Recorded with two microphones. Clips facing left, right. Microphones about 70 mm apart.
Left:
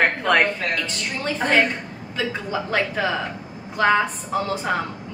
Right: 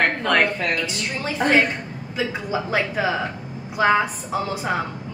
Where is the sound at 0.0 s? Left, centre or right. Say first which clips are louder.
Left 1 dB; centre.